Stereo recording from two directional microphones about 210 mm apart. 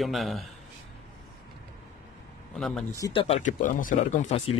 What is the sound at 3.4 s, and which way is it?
Speech, 40° left (ahead or behind).